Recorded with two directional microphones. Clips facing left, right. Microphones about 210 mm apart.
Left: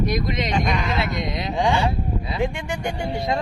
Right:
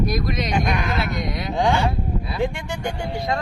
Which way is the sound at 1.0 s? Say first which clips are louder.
Even; 20° left (ahead or behind).